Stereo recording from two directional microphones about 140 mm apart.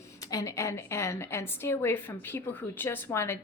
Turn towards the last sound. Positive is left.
turn(degrees=20)  # may be behind; listen again after turning